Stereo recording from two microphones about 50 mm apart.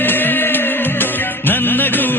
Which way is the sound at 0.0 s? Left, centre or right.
Left.